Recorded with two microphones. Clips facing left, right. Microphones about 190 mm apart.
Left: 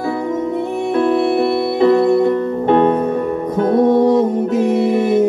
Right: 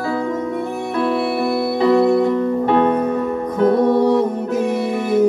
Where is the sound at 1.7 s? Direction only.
55° left (ahead or behind).